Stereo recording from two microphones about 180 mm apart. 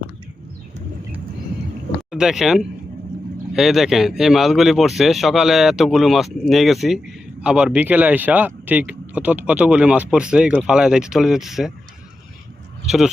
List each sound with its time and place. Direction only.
2.0 s speech: 5° right (ahead or behind)